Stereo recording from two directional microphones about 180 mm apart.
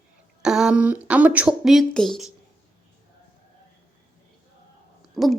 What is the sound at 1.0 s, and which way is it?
Speech, 10° right (ahead or behind).